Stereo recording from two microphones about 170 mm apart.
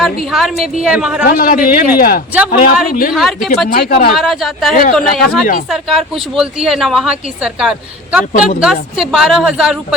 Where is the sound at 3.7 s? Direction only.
70° left (ahead or behind).